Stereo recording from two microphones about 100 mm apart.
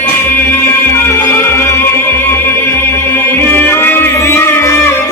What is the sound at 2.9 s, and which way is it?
Music, 20° left (ahead or behind).